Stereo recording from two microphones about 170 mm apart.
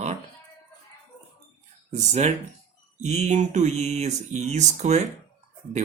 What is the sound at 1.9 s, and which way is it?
Speech, 40° right (ahead or behind).